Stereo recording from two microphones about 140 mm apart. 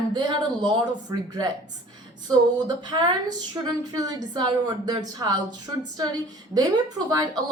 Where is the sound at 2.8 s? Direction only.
30° right (ahead or behind).